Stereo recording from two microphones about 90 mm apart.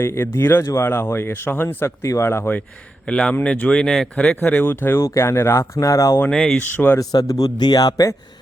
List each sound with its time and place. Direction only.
0.0 s speech: 30° left (ahead or behind)
3.1 s speech: 10° left (ahead or behind); by 6.1 s 35° left (ahead or behind)
6.3 s speech: 10° left (ahead or behind)
6.7 s speech: 25° left (ahead or behind)
7.0 s a man's voice: 40° left (ahead or behind)